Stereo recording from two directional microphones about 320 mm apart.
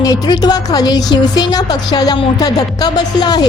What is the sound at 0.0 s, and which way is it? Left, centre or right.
Music, centre.